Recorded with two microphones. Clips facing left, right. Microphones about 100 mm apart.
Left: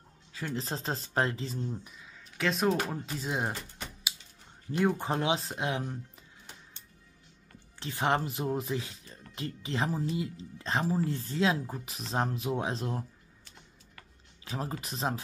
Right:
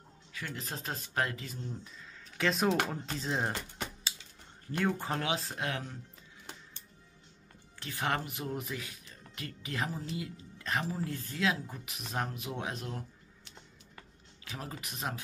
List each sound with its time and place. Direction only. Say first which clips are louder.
0.3 s speech: left 6 dB; 30° left (ahead or behind)
2.3 s speech: left 1 dB; centre (ahead or behind)
4.7 s speech: left 4 dB; 20° left (ahead or behind)
7.8 s speech: left 5 dB; 25° left (ahead or behind)
14.4 s speech: left 6 dB; 30° left (ahead or behind)